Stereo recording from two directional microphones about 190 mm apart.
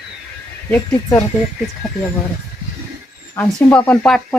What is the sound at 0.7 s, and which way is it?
Speech, 15° left (ahead or behind).